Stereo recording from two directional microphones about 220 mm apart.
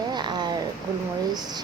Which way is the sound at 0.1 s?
20° right (ahead or behind).